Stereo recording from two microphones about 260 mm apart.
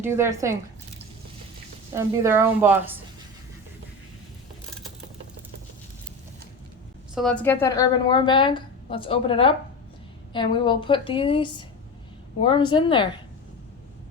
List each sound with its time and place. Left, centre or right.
0.0 s a woman's voice: centre
2.0 s a woman's voice: centre
7.2 s a woman's voice: centre